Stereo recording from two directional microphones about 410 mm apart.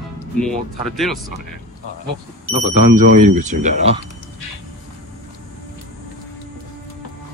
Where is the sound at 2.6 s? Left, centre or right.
Centre.